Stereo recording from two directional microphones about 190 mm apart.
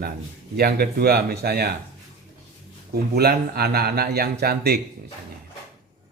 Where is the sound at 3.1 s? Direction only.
55° right (ahead or behind).